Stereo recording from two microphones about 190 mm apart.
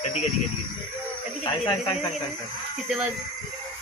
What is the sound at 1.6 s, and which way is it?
Speech, 20° left (ahead or behind).